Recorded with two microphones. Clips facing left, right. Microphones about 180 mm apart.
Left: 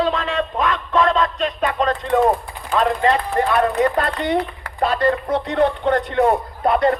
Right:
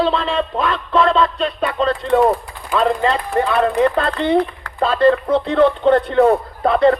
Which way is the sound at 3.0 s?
30° right (ahead or behind).